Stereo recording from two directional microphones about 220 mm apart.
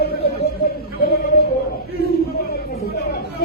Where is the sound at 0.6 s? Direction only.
45° left (ahead or behind).